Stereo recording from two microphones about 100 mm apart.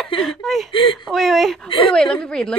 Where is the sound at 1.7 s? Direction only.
60° left (ahead or behind).